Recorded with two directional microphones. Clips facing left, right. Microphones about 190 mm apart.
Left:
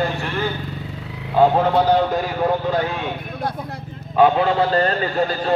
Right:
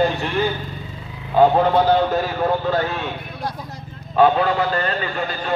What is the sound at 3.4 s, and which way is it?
Speech, 55° left (ahead or behind).